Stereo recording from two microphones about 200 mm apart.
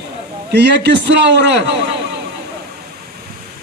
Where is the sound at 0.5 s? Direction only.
60° right (ahead or behind).